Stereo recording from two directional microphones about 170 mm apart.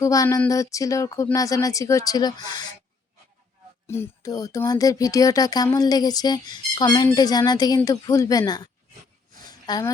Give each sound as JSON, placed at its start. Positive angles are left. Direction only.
{"t": 0.0, "sound": "speech", "side_deg": 20}
{"t": 3.8, "sound": "speech", "side_deg": 15}
{"t": 9.4, "sound": "a sound", "side_deg": 25}